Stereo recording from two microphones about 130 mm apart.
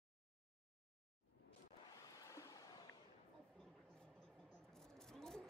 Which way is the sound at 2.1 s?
25° left (ahead or behind).